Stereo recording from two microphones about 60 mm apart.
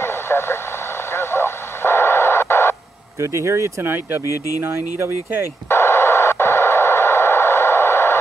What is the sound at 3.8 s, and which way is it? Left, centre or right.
Speech, right.